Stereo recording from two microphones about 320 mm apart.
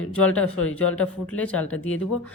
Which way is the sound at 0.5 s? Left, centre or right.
Left.